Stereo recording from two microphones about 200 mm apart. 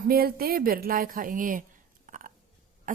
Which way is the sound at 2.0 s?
40° right (ahead or behind).